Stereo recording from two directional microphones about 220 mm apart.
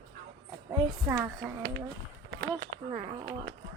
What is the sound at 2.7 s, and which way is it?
Speech, 60° right (ahead or behind).